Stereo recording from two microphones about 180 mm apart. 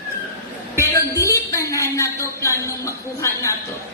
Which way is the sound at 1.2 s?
15° left (ahead or behind).